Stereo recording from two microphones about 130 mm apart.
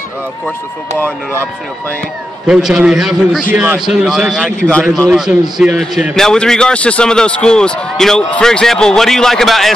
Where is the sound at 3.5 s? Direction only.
15° right (ahead or behind).